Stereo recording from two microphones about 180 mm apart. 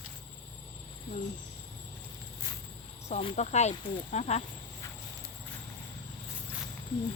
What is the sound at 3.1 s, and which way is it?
Speech, 40° left (ahead or behind).